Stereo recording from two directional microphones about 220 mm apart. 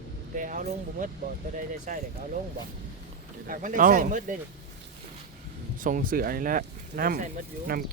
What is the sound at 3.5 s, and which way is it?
Speech, 35° right (ahead or behind).